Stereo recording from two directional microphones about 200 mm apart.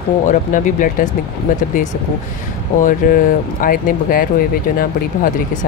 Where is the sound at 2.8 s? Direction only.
45° left (ahead or behind).